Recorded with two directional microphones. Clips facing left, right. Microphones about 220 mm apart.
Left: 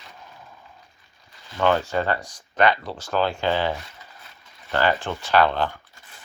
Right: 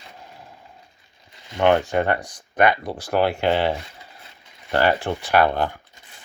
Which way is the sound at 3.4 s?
20° right (ahead or behind).